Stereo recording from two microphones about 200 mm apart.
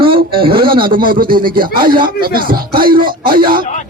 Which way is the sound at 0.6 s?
45° right (ahead or behind).